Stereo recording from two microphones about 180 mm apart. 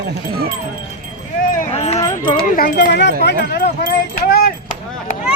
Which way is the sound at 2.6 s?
55° left (ahead or behind).